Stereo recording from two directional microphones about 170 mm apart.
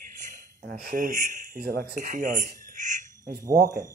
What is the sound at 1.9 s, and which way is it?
Speech, 50° right (ahead or behind).